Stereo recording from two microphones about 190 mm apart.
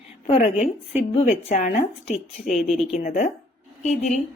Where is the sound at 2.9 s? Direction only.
40° left (ahead or behind).